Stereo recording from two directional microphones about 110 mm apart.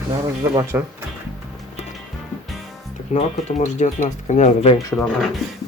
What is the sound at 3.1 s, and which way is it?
Speech, 90° left.